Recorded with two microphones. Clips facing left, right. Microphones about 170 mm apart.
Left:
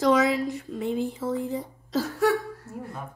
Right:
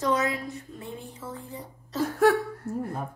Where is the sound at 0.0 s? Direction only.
90° left.